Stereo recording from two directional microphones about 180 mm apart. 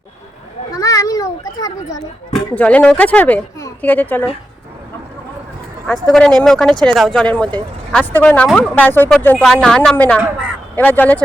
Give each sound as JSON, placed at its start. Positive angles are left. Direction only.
{"t": 0.7, "sound": "children playing", "side_deg": 20}
{"t": 2.3, "sound": "speech", "side_deg": 5}
{"t": 5.9, "sound": "speech", "side_deg": 5}